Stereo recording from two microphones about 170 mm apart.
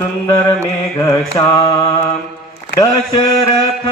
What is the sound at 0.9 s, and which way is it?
Mantra, 15° left (ahead or behind).